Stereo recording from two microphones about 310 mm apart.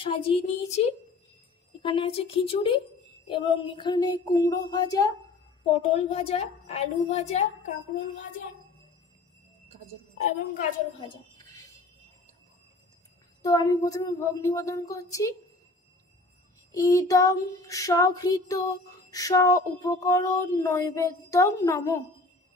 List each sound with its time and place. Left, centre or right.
0.0 s a woman's voice: centre
1.8 s female singing: centre
5.7 s a woman's voice: centre
11.0 s speech: centre
13.4 s female singing: centre
16.7 s female singing: centre